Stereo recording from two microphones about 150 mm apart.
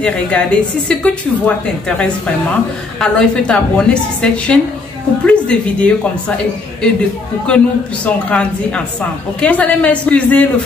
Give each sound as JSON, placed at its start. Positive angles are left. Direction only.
{"t": 0.0, "sound": "a woman's voice", "side_deg": 5}